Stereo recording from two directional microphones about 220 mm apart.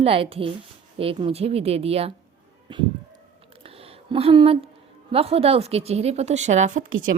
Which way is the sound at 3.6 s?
25° right (ahead or behind).